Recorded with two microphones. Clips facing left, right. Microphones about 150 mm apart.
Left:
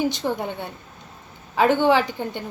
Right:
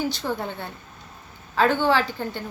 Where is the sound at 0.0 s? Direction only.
15° left (ahead or behind).